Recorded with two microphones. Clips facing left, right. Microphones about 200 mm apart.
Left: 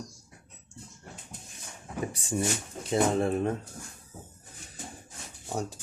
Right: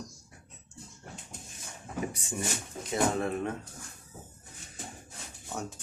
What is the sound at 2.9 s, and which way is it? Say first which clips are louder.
Speech: left 4 dB; 30° left (ahead or behind).